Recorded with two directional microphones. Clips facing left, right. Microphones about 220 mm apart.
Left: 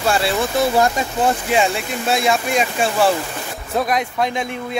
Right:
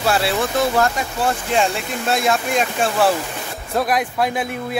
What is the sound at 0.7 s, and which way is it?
Speech, 20° left (ahead or behind).